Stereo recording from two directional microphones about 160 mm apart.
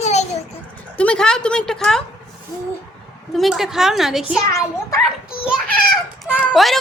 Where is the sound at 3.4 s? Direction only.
Centre (ahead or behind).